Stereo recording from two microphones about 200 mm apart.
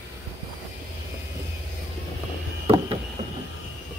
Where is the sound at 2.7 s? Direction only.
30° right (ahead or behind).